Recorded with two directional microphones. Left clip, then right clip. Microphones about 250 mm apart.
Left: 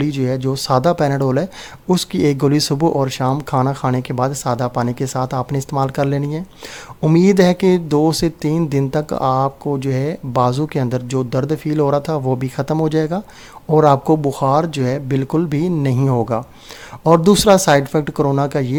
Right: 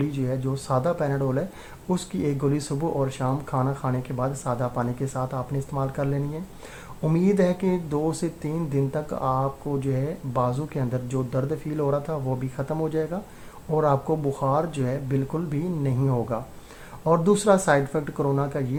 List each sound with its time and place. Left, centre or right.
0.0 s speech: left